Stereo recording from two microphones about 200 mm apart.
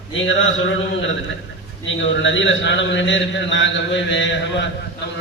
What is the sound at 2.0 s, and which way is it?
A man's voice, 70° left (ahead or behind).